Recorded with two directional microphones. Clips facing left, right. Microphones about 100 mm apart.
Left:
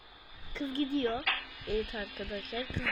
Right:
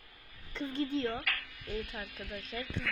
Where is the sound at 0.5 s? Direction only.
15° left (ahead or behind).